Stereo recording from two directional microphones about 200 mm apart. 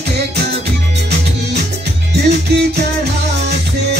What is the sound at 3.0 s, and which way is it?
Music, 55° right (ahead or behind).